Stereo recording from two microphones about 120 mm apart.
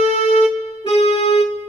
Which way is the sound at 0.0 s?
60° left (ahead or behind).